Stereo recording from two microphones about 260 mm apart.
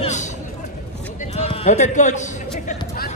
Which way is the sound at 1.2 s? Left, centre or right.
Left.